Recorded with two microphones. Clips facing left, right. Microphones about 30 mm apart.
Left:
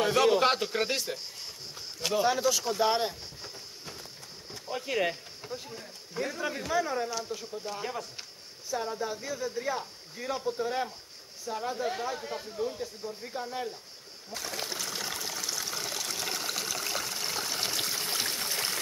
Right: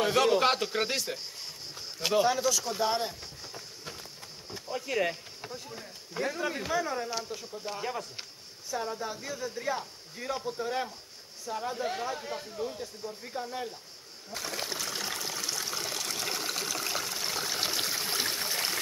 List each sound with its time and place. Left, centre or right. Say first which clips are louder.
0.0 s speech: left 1 dB; centre
1.8 s a sound: right 3 dB; centre
2.2 s speech: left 1 dB; centre
4.6 s speech: left 1 dB; centre
5.7 s speech: even; centre
7.1 s speech: left 1 dB; centre
7.6 s speech: right 3 dB; centre
14.3 s trickle: right 1 dB; centre